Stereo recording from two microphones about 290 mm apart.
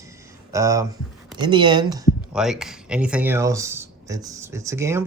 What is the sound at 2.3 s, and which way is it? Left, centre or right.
Speech, centre.